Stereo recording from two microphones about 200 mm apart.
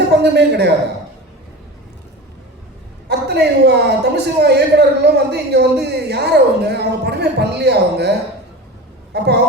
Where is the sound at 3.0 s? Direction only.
55° right (ahead or behind).